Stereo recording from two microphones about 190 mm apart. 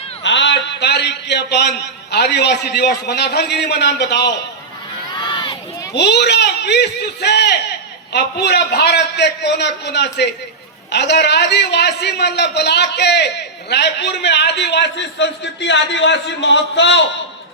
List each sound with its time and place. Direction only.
0.2 s a man's voice: 70° left (ahead or behind)
5.1 s crowd: 25° left (ahead or behind)
5.9 s a man's voice: 60° left (ahead or behind)